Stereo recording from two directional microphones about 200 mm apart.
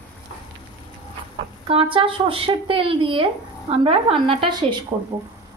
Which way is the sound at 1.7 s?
25° right (ahead or behind).